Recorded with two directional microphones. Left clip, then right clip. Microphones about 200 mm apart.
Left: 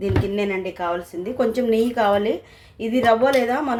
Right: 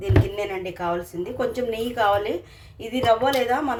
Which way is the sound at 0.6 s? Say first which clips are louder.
Left 2 dB; 35° left (ahead or behind).